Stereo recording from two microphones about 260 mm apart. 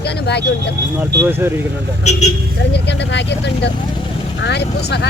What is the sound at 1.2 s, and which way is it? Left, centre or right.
Speech, centre.